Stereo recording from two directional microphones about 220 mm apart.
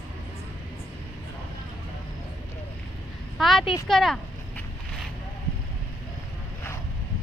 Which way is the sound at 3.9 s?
Centre (ahead or behind).